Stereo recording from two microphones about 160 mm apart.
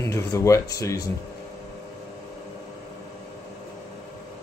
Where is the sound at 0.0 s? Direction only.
20° left (ahead or behind).